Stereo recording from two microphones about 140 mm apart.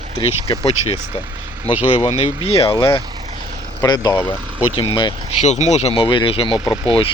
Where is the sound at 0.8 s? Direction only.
45° left (ahead or behind).